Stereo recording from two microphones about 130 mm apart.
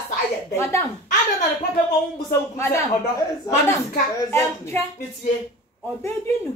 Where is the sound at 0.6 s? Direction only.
20° left (ahead or behind).